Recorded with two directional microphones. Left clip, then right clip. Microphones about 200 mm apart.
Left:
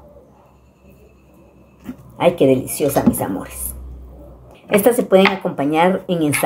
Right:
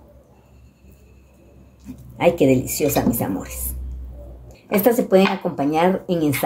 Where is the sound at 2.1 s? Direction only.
20° right (ahead or behind).